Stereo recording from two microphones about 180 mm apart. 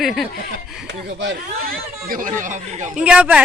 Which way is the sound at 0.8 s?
80° right.